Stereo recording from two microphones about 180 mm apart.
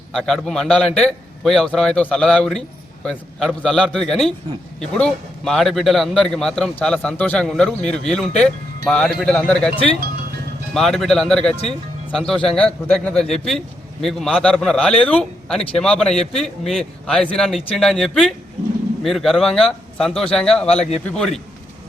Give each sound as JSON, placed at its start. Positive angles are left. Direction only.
{"t": 0.1, "sound": "a man's voice", "side_deg": 0}
{"t": 10.8, "sound": "a man's voice", "side_deg": 0}